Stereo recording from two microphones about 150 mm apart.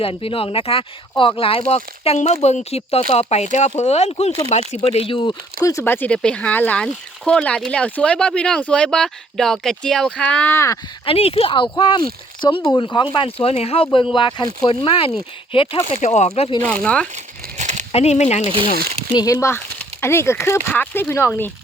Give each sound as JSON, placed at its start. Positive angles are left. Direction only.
{"t": 0.0, "sound": "speech", "side_deg": 40}
{"t": 4.8, "sound": "speech", "side_deg": 35}
{"t": 11.0, "sound": "speech", "side_deg": 40}
{"t": 16.0, "sound": "speech", "side_deg": 50}
{"t": 16.8, "sound": "speech", "side_deg": 5}
{"t": 17.6, "sound": "crumpling", "side_deg": -50}
{"t": 17.9, "sound": "speech", "side_deg": 45}
{"t": 19.1, "sound": "speech", "side_deg": 25}